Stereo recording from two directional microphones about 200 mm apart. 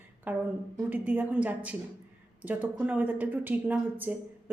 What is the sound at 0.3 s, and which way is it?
A woman's voice, 5° right (ahead or behind).